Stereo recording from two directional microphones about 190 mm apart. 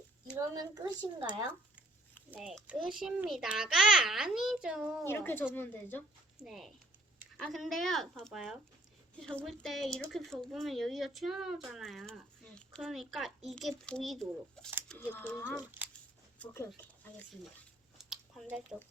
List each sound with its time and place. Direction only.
0.3 s speech: 20° right (ahead or behind)
2.3 s speech: 5° right (ahead or behind)
5.0 s a woman's voice: 10° left (ahead or behind)
6.4 s a woman's voice: centre (ahead or behind)
17.9 s a sound: centre (ahead or behind)